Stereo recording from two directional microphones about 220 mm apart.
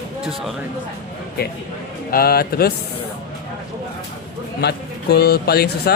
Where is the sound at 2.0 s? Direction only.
45° left (ahead or behind).